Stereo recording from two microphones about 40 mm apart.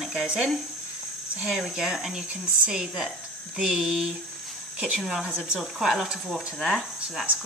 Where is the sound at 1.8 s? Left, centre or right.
Centre.